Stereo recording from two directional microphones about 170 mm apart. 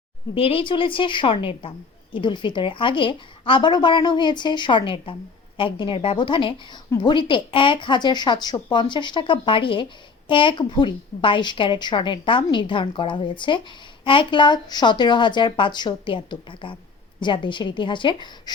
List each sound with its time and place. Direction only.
0.3 s a woman's voice: 35° left (ahead or behind)